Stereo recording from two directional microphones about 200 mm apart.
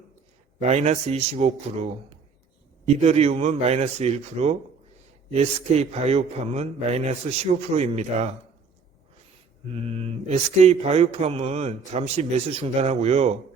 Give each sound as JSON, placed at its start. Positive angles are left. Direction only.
{"t": 0.6, "sound": "speech", "side_deg": -35}
{"t": 9.7, "sound": "speech", "side_deg": -30}